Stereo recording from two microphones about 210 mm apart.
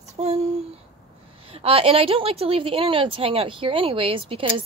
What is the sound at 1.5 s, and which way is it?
A woman's voice, 25° right (ahead or behind).